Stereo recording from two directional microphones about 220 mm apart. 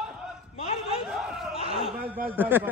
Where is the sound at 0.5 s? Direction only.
25° left (ahead or behind).